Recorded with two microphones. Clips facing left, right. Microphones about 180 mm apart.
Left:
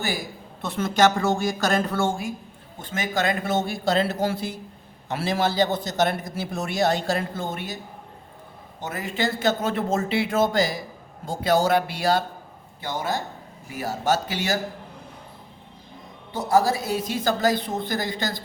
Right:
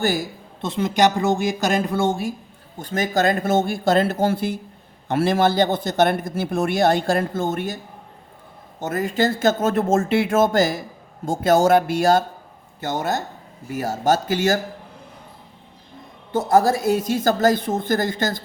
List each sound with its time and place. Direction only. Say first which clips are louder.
0.6 s speech: right 2 dB; 20° right (ahead or behind)
2.7 s a woman's voice: right 5 dB; 40° right (ahead or behind)
8.8 s a woman's voice: right 6 dB; 45° right (ahead or behind)
16.3 s a woman's voice: right 4 dB; 50° right (ahead or behind)